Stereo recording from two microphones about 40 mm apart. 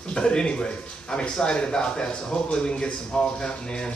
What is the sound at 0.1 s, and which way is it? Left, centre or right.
Speech, left.